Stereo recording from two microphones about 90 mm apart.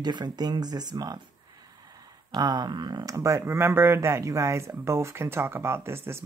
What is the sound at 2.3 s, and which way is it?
Speech, 50° right (ahead or behind).